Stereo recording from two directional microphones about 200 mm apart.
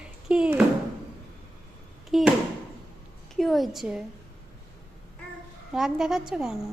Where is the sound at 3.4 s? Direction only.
Centre (ahead or behind).